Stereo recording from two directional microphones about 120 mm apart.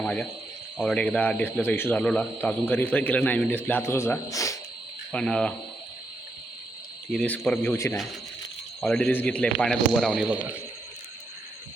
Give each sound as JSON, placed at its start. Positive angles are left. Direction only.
{"t": 0.0, "sound": "speech", "side_deg": 10}
{"t": 5.1, "sound": "speech", "side_deg": 5}
{"t": 7.1, "sound": "speech", "side_deg": 5}
{"t": 7.6, "sound": "speech", "side_deg": 20}
{"t": 8.8, "sound": "speech", "side_deg": 5}